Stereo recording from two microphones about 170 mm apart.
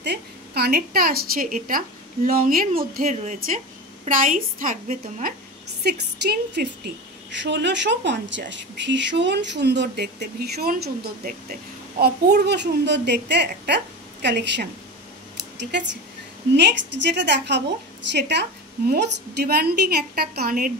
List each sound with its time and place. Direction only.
0.0 s a woman's voice: 70° right (ahead or behind); by 5.3 s 55° right (ahead or behind)
5.9 s a woman's voice: 75° right (ahead or behind)
7.2 s speech: 90° right; by 11.3 s 60° right (ahead or behind)
12.0 s speech: 75° right (ahead or behind)
16.5 s a woman's voice: 90° right; by 20.7 s 60° right (ahead or behind)